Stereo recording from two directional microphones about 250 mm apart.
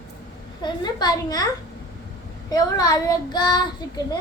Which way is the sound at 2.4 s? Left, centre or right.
Centre.